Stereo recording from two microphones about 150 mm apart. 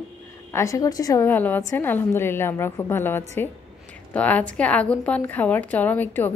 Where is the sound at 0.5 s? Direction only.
20° left (ahead or behind).